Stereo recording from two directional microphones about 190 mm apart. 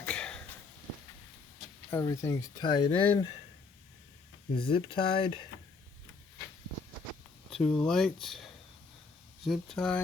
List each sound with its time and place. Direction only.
0.0 s a sound: 5° left (ahead or behind)
1.9 s speech: 15° left (ahead or behind)
4.5 s speech: 25° left (ahead or behind)
7.5 s speech: 5° left (ahead or behind)